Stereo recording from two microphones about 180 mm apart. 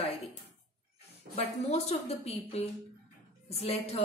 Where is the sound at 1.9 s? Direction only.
35° left (ahead or behind).